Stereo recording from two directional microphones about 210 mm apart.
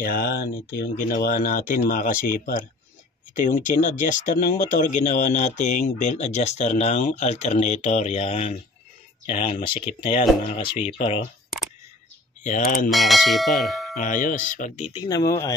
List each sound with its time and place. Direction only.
0.0 s speech: 45° left (ahead or behind); by 11.2 s 25° left (ahead or behind)
12.4 s speech: 40° left (ahead or behind)
12.9 s speech: centre (ahead or behind)
13.9 s speech: 40° left (ahead or behind)
15.0 s speech: 15° left (ahead or behind)